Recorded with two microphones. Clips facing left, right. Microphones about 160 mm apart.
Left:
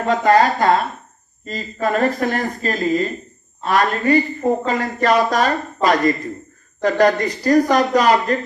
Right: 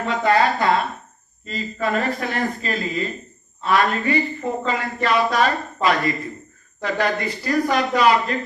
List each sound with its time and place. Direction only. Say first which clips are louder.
0.0 s speech: left 4 dB; 40° left (ahead or behind)